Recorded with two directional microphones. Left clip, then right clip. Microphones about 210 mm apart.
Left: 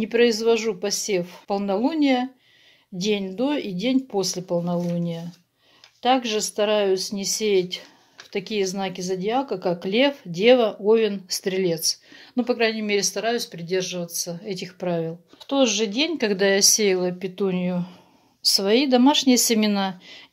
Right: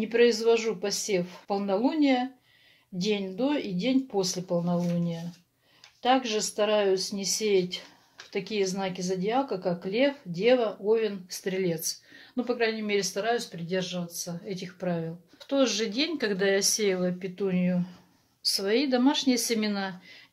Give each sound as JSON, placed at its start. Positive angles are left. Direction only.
{"t": 0.0, "sound": "speech", "side_deg": 40}